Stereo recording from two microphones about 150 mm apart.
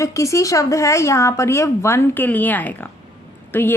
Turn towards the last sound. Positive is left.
turn(degrees=15)  # may be behind; listen again after turning